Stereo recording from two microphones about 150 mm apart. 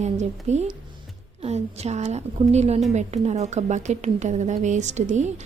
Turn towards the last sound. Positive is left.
turn(degrees=-50)  # may be behind; listen again after turning